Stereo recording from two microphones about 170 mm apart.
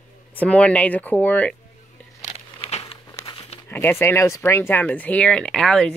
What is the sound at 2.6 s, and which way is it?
Crumpling, 35° left (ahead or behind).